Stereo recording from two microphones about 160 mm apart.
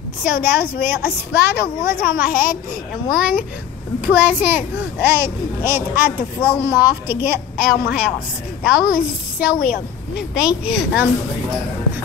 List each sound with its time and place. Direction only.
0.2 s a woman's voice: 10° right (ahead or behind)
8.9 s a child's voice: 65° left (ahead or behind)
10.3 s speech: 5° right (ahead or behind)